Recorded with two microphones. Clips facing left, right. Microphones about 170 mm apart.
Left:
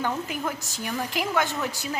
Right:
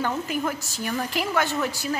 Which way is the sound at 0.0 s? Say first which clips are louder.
Right 2 dB; 15° left (ahead or behind).